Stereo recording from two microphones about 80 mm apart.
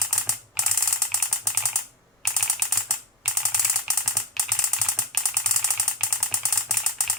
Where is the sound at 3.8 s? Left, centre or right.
Centre.